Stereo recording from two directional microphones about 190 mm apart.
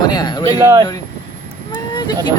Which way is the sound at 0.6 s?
15° right (ahead or behind).